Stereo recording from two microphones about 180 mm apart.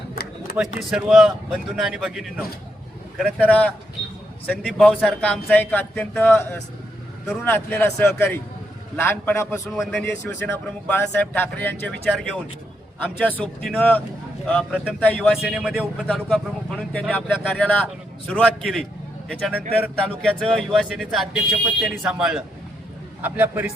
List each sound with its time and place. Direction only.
0.2 s a sound: 60° left (ahead or behind)
0.5 s speech: 5° right (ahead or behind)
3.4 s speech: 10° left (ahead or behind)
9.7 s speech: centre (ahead or behind)
10.2 s speech: 10° left (ahead or behind)
13.1 s a man's voice: 5° left (ahead or behind); by 23.7 s 10° right (ahead or behind)